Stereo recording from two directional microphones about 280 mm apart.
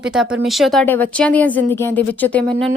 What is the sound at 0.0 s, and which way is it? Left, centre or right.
Speech, centre.